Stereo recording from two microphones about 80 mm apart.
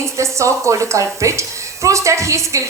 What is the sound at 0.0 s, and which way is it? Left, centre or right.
A woman's voice, right.